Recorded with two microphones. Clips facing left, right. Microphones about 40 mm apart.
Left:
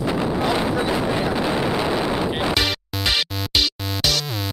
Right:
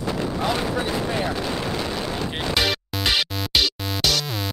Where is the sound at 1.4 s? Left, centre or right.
Centre.